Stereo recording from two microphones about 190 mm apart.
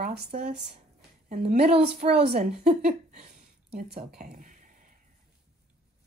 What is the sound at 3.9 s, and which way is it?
Speech, 55° right (ahead or behind).